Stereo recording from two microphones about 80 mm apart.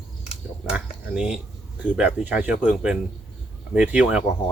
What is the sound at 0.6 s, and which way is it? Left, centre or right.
Speech, centre.